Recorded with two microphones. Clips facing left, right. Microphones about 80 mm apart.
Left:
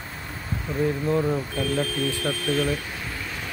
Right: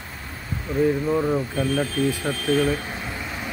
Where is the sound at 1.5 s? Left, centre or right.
Right.